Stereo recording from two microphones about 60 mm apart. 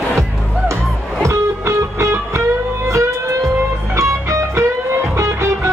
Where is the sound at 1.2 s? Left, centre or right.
Right.